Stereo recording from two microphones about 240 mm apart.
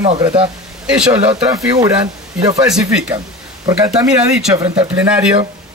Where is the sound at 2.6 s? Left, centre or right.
Centre.